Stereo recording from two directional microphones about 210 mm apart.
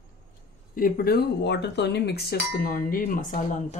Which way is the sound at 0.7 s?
45° left (ahead or behind).